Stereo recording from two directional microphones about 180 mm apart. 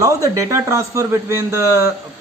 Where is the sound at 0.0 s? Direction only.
20° right (ahead or behind).